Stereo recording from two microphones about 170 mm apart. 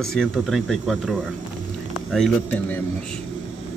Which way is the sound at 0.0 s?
Centre (ahead or behind).